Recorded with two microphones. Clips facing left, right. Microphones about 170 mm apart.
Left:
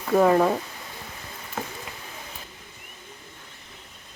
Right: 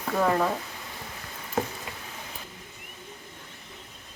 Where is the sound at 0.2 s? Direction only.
25° left (ahead or behind).